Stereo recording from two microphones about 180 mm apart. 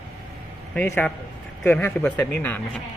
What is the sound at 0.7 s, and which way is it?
Speech, 10° left (ahead or behind).